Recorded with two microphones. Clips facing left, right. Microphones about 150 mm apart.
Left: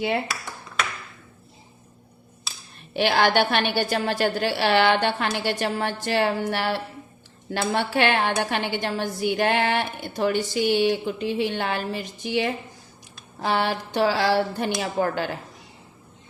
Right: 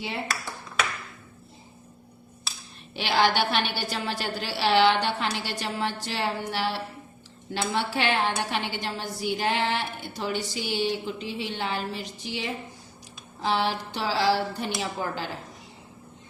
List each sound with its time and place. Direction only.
2.9 s a woman's voice: 55° left (ahead or behind)